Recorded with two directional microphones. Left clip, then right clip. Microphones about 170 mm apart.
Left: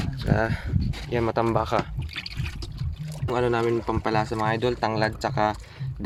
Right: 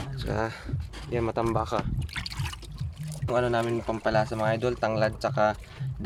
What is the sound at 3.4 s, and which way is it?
Speech, 5° left (ahead or behind).